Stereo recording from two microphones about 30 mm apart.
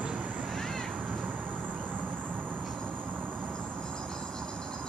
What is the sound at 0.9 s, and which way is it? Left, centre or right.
Vehicle, right.